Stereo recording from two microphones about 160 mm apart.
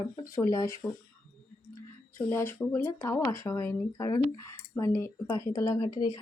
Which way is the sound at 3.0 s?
20° left (ahead or behind).